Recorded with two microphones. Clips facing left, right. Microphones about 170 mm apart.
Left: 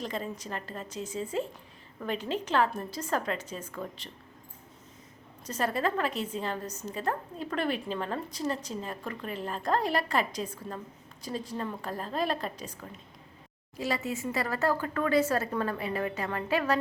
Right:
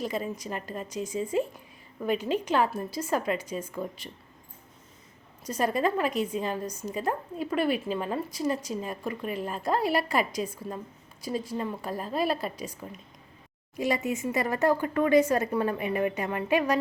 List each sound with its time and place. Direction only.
0.0 s a woman's voice: 10° right (ahead or behind)
5.5 s a woman's voice: 15° right (ahead or behind)